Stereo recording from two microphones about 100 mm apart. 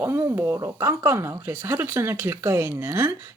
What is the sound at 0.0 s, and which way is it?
Speech, 25° right (ahead or behind).